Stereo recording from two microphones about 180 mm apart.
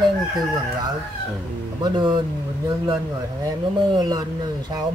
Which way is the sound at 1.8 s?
25° right (ahead or behind).